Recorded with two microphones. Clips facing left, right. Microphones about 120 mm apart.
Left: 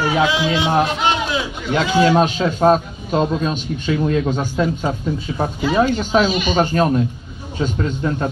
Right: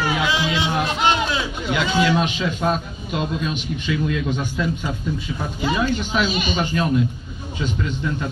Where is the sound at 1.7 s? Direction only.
40° left (ahead or behind).